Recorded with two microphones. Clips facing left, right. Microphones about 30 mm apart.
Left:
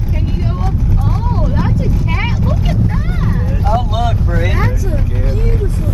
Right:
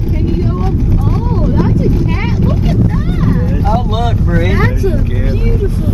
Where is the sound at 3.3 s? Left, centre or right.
Centre.